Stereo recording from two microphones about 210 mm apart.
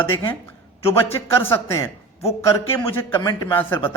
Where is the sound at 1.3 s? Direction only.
10° left (ahead or behind).